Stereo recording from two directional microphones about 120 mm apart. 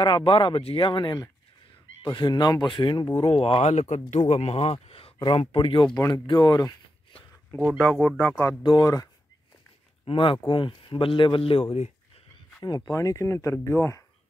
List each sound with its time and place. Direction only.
0.0 s speech: 45° left (ahead or behind)
3.3 s speech: 50° left (ahead or behind)
3.6 s speech: 70° left (ahead or behind)
4.3 s speech: 55° left (ahead or behind)
5.9 s speech: 25° left (ahead or behind)
7.8 s speech: 10° left (ahead or behind)
8.6 s speech: 35° left (ahead or behind)
10.0 s speech: 45° left (ahead or behind)
12.6 s speech: 35° left (ahead or behind)